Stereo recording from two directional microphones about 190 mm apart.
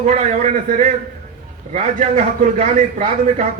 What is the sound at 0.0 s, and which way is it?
A man's voice, 40° right (ahead or behind).